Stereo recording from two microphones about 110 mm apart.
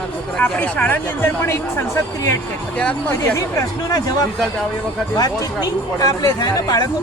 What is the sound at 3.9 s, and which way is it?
Speech, 35° left (ahead or behind).